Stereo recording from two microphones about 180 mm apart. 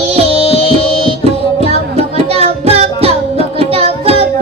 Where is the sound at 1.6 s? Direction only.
35° right (ahead or behind).